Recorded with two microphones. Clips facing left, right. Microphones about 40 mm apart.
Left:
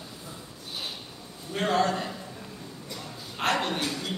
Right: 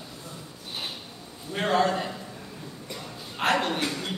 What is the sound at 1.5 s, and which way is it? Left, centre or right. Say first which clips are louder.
Speech: right 1 dB; centre.